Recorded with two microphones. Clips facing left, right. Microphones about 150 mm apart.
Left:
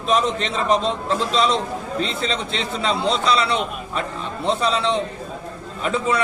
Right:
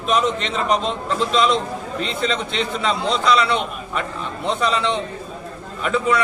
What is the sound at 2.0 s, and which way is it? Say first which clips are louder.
A man's voice: right 2 dB; 30° left (ahead or behind).